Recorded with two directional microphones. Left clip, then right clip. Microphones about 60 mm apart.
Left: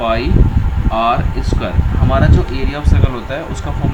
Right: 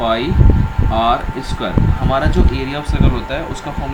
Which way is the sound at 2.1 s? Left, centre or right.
Left.